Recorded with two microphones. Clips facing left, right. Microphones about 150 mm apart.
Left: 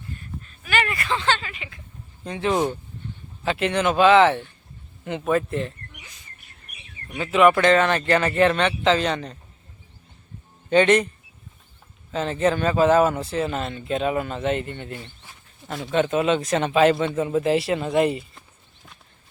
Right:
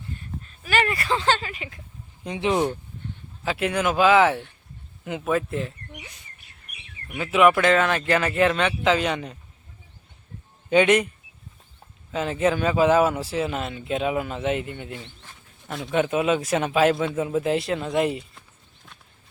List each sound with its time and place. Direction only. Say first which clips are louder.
0.4 s speech: right 1 dB; 35° right (ahead or behind)
2.2 s speech: even; 15° right (ahead or behind)
5.9 s bird: right 6 dB; 60° right (ahead or behind)
7.2 s speech: left 1 dB; 5° right (ahead or behind)
10.7 s speech: left 1 dB; 5° right (ahead or behind)
12.1 s speech: left 1 dB; 5° right (ahead or behind)
15.0 s speech: even; 5° left (ahead or behind)